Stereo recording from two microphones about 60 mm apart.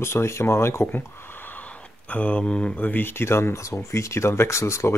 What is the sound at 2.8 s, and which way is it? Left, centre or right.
Speech, left.